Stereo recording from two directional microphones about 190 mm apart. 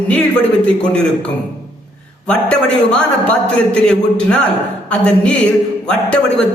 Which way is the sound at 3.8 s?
5° left (ahead or behind).